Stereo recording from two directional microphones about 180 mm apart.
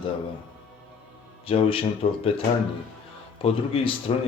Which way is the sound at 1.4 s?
30° left (ahead or behind).